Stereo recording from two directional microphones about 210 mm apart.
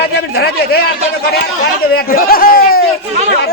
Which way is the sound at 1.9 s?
45° left (ahead or behind).